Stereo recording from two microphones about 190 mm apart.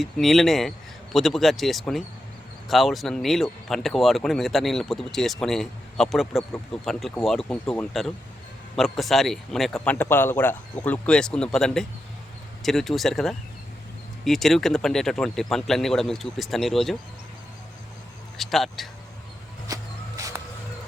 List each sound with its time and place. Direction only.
0.0 s speech: centre (ahead or behind)
18.3 s speech: centre (ahead or behind)
19.6 s a sound: 20° right (ahead or behind)